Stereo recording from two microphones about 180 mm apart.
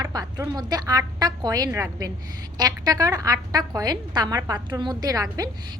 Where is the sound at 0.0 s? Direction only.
20° right (ahead or behind).